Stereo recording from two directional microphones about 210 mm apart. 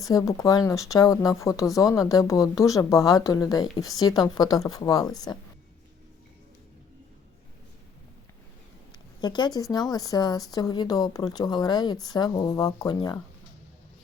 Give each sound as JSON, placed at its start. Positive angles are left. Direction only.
{"t": 0.0, "sound": "speech", "side_deg": 15}
{"t": 9.2, "sound": "speech", "side_deg": 20}